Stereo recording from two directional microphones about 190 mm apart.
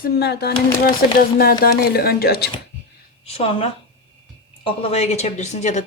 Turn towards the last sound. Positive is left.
turn(degrees=40)  # may be behind; listen again after turning